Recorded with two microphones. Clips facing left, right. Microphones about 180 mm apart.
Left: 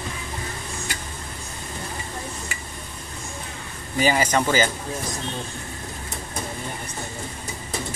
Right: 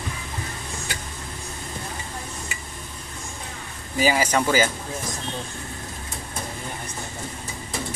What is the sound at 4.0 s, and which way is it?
Speech, 5° right (ahead or behind).